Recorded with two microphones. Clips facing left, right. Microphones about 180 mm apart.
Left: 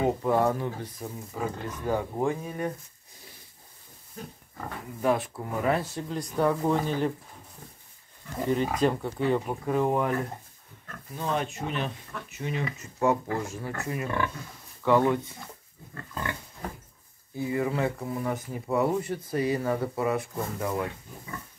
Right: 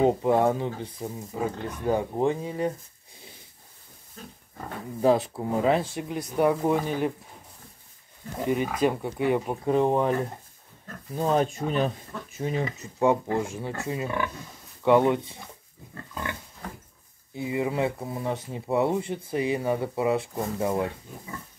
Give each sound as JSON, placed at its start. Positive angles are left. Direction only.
{"t": 0.0, "sound": "speech", "side_deg": -20}
{"t": 5.0, "sound": "speech", "side_deg": -25}
{"t": 8.5, "sound": "speech", "side_deg": -10}
{"t": 11.1, "sound": "speech", "side_deg": -35}
{"t": 12.8, "sound": "speech", "side_deg": -20}
{"t": 17.4, "sound": "speech", "side_deg": -20}